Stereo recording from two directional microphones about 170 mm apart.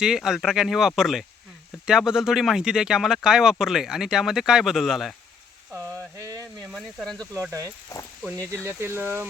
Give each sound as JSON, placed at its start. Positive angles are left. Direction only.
{"t": 0.0, "sound": "speech", "side_deg": -5}
{"t": 5.7, "sound": "a sound", "side_deg": -15}
{"t": 6.7, "sound": "speech", "side_deg": 0}
{"t": 8.4, "sound": "speech", "side_deg": -15}